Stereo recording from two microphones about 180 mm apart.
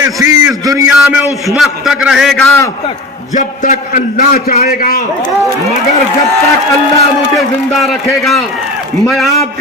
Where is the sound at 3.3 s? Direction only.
45° left (ahead or behind).